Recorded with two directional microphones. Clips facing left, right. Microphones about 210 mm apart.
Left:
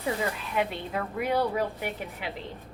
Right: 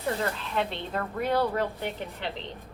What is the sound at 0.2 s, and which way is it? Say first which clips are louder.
A woman's voice: even; 10° left (ahead or behind).